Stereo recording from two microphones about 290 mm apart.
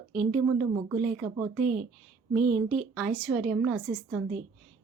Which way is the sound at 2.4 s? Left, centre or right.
Right.